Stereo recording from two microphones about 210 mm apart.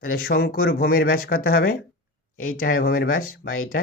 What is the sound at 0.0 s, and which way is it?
Speech, 45° left (ahead or behind).